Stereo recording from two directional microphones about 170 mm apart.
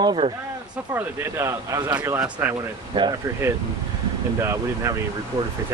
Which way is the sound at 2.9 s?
30° right (ahead or behind).